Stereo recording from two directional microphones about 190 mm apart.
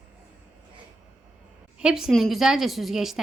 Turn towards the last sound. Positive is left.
turn(degrees=0)  # may be behind; listen again after turning